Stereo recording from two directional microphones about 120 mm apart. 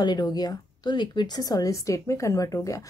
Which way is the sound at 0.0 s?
35° left (ahead or behind).